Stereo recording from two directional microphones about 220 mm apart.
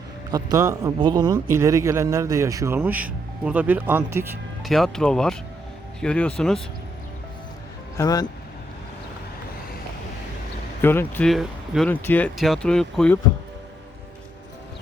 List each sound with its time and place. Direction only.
0.3 s a man's voice: 15° right (ahead or behind)
4.6 s speech: centre (ahead or behind)
7.9 s speech: 15° left (ahead or behind)
10.8 s speech: 10° left (ahead or behind)